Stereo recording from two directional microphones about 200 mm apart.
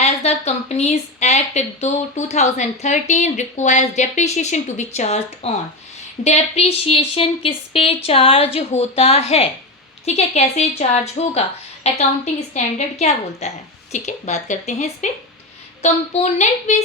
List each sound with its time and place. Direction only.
0.0 s speech: 35° left (ahead or behind)